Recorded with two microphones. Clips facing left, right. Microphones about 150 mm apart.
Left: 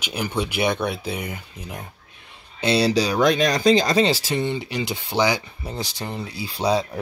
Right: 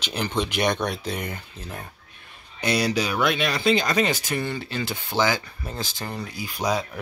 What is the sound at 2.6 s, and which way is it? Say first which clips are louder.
Speech: left 4 dB; 30° left (ahead or behind).